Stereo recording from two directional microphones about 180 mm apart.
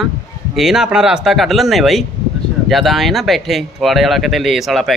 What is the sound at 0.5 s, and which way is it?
Speech, centre (ahead or behind).